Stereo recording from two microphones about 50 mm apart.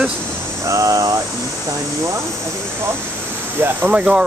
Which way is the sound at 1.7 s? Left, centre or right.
Right.